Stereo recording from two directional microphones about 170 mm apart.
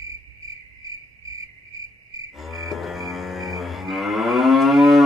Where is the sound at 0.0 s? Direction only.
20° right (ahead or behind).